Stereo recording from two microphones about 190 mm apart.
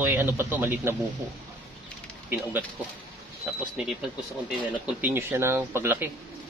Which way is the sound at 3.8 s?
5° right (ahead or behind).